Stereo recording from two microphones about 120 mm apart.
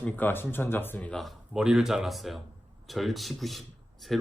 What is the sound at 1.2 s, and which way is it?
Speech, centre (ahead or behind).